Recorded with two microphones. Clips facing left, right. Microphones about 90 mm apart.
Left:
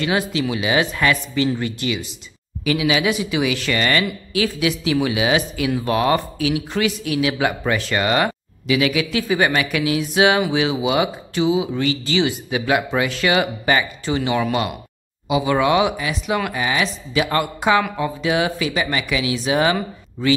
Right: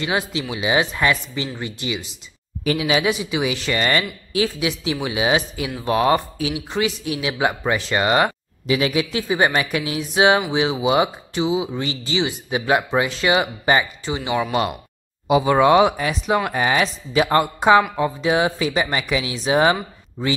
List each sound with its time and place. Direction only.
0.0 s a man's voice: 25° right (ahead or behind)
2.6 s a man's voice: 35° right (ahead or behind); by 14.6 s 15° right (ahead or behind)
15.2 s speech: 40° right (ahead or behind)